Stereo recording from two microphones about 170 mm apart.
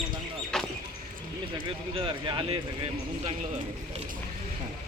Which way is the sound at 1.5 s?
30° right (ahead or behind).